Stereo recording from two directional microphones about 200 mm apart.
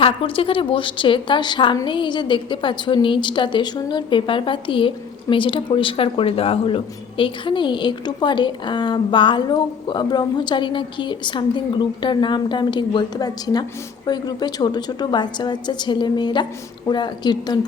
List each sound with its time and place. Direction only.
0.0 s a woman's voice: 25° left (ahead or behind)